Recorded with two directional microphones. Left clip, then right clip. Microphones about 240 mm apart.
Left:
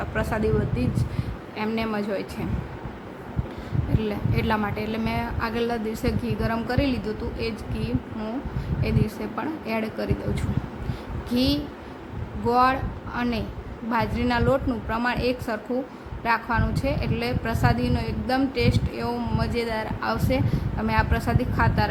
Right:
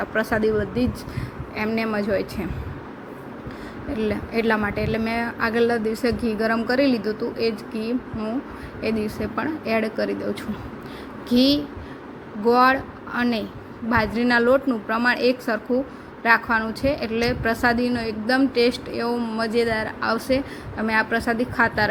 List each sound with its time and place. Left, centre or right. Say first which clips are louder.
0.0 s a woman's voice: right 4 dB; centre
4.1 s a woman's voice: right 5 dB; centre
11.3 s a woman's voice: right 5 dB; centre